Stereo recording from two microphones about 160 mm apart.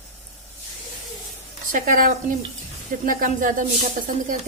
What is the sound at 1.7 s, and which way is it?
Speech, 60° right (ahead or behind).